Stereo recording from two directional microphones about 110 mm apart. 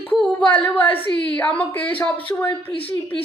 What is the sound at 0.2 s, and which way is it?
Speech, 10° left (ahead or behind).